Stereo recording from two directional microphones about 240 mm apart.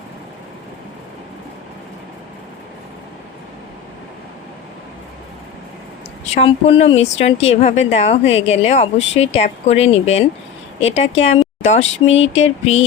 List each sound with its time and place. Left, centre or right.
6.3 s speech: left